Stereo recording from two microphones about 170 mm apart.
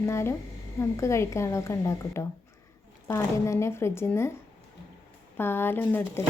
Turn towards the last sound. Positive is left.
turn(degrees=10)  # may be behind; listen again after turning